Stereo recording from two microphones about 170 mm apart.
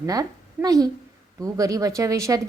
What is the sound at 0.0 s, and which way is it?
A woman's voice, 20° right (ahead or behind).